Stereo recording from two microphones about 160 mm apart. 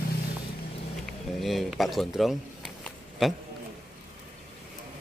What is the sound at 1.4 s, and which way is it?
A man's voice, centre (ahead or behind).